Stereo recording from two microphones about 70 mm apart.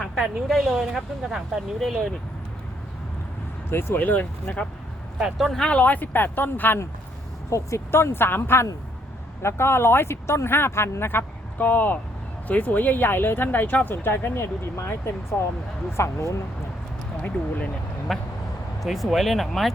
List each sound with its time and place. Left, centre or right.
0.0 s a woman's voice: centre
3.7 s speech: left
5.5 s speech: centre
5.8 s speech: left
7.5 s speech: left
17.2 s speech: left
18.1 s a woman's voice: centre